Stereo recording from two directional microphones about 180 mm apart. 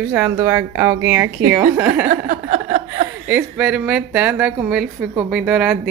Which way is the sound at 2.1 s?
45° right (ahead or behind).